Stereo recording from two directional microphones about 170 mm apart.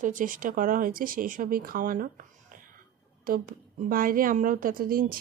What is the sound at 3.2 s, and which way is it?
A woman's voice, 55° right (ahead or behind).